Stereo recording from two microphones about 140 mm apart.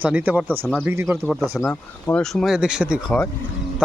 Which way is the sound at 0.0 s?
10° right (ahead or behind).